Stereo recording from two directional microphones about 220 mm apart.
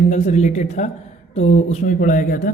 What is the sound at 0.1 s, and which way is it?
A woman's voice, 30° left (ahead or behind).